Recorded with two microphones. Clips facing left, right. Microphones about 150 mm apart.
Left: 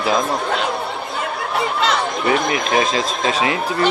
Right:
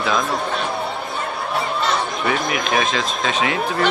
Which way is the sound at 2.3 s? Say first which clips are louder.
Left 3 dB; 30° left (ahead or behind).